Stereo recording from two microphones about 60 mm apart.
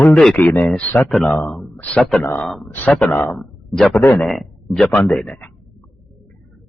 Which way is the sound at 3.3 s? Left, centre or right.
Centre.